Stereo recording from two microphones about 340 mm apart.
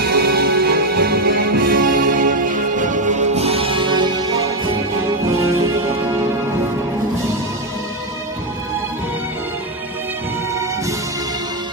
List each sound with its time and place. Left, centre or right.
0.0 s music: right